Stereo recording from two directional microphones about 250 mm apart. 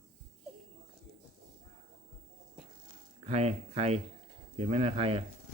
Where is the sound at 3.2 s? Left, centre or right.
Right.